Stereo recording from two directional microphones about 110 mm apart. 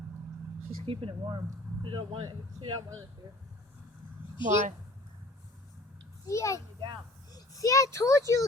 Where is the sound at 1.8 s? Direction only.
45° right (ahead or behind).